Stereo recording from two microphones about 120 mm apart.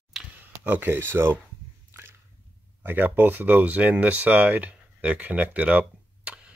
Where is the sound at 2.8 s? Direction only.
15° right (ahead or behind).